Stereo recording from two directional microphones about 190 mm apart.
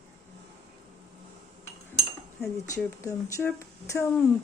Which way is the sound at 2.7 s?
15° left (ahead or behind).